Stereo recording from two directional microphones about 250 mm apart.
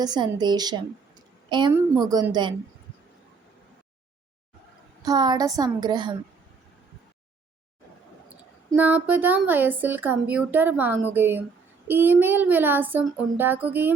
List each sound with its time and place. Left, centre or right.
0.0 s a woman's voice: centre
5.0 s a woman's voice: centre
8.7 s a woman's voice: centre